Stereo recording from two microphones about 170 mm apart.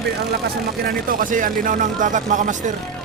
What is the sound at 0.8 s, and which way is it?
Speech, 55° right (ahead or behind).